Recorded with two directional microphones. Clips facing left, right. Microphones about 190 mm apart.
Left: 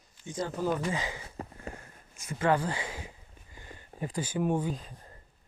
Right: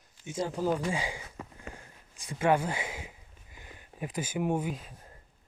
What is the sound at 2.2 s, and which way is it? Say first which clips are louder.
Speech: right 1 dB; 15° right (ahead or behind).